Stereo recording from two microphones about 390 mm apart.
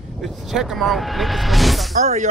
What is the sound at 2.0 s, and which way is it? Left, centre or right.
Speech, centre.